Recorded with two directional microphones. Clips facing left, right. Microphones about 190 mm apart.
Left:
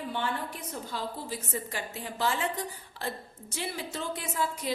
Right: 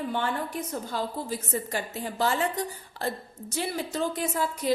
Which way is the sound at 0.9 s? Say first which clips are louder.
Right 4 dB; 45° right (ahead or behind).